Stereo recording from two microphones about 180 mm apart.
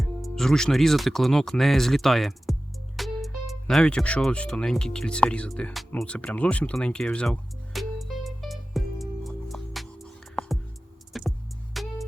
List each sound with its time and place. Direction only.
0.0 s music: centre (ahead or behind)